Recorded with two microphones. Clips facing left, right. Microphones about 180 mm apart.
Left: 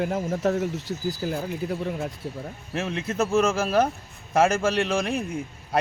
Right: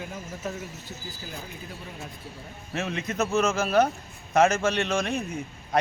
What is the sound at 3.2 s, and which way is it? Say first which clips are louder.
A man's voice: left 3 dB; 10° left (ahead or behind).